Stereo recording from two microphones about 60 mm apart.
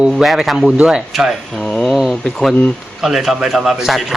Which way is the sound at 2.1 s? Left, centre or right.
Centre.